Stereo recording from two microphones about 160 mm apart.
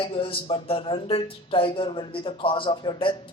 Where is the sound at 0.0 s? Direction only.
35° left (ahead or behind).